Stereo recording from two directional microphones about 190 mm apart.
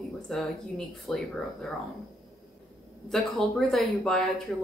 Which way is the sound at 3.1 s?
Centre (ahead or behind).